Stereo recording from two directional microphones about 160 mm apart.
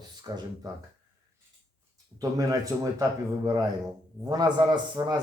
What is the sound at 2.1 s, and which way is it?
A man's voice, 20° right (ahead or behind).